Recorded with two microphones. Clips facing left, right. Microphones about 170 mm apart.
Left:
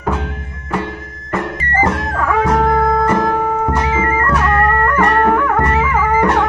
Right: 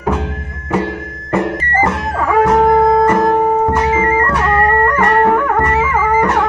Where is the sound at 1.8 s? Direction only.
5° right (ahead or behind).